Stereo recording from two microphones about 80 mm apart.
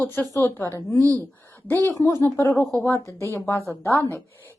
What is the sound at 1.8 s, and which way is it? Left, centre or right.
A woman's voice, left.